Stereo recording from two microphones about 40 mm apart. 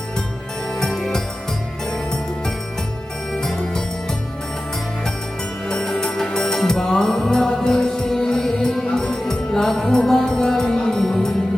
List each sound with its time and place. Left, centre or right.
0.9 s music: centre
5.6 s music: centre